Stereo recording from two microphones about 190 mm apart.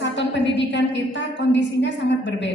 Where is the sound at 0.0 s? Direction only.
65° left (ahead or behind).